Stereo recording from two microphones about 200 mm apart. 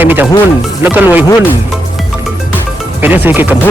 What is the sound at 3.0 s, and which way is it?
Speech, 10° right (ahead or behind).